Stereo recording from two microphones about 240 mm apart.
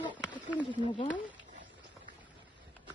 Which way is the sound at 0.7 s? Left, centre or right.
Left.